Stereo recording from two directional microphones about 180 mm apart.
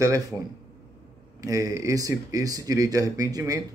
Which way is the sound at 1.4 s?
20° right (ahead or behind).